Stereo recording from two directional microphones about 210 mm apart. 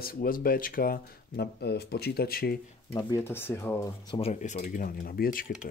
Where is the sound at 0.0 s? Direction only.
45° left (ahead or behind).